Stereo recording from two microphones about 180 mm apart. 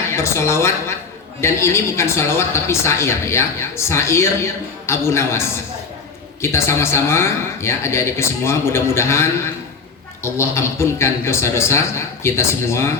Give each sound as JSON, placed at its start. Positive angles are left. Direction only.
{"t": 0.1, "sound": "a woman's voice", "side_deg": 15}